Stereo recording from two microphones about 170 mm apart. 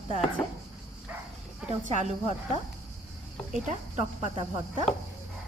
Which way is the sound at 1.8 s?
40° right (ahead or behind).